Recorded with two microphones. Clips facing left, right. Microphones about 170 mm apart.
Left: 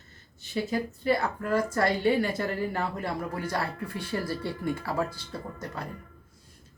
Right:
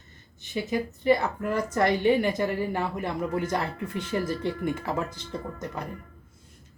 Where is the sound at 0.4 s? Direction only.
15° right (ahead or behind).